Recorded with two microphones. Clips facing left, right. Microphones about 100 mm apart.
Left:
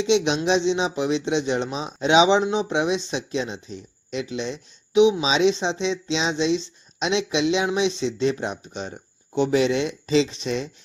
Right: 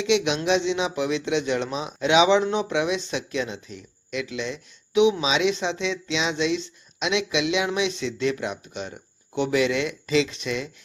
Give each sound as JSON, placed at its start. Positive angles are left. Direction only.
{"t": 0.0, "sound": "speech", "side_deg": 25}